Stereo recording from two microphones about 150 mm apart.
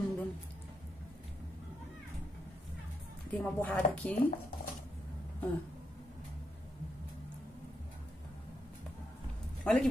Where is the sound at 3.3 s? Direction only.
10° left (ahead or behind).